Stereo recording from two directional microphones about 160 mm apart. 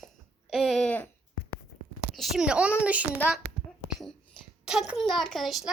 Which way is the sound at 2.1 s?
Centre (ahead or behind).